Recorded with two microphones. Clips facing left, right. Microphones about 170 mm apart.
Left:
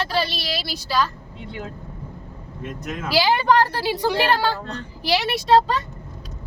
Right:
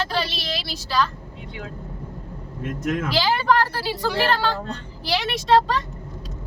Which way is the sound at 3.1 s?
15° left (ahead or behind).